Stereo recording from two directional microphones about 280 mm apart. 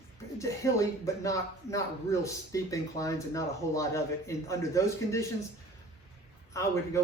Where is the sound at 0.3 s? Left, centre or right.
Centre.